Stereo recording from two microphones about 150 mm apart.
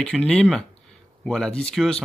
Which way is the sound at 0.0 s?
5° left (ahead or behind).